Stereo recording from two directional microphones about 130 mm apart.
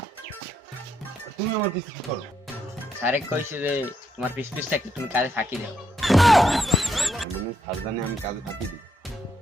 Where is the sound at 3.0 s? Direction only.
15° right (ahead or behind).